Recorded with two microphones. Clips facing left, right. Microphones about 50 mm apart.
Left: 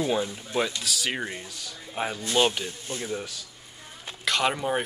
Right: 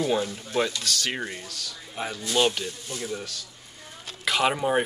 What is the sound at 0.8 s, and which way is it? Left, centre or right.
Speech, centre.